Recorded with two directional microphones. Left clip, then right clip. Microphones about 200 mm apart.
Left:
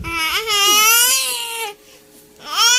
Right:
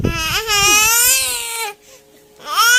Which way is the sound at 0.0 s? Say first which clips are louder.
Even; 20° right (ahead or behind).